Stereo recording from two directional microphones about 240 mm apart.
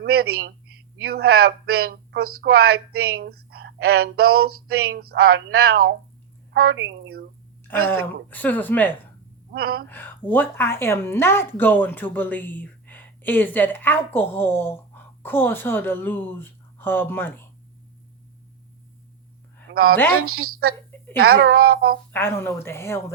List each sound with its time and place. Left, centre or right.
0.0 s a woman's voice: right
7.9 s speech: centre
9.5 s speech: right
9.9 s speech: centre
19.7 s a woman's voice: right
20.2 s a woman's voice: right
21.2 s speech: right
22.1 s speech: centre